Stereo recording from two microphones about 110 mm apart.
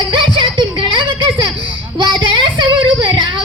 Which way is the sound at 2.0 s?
45° right (ahead or behind).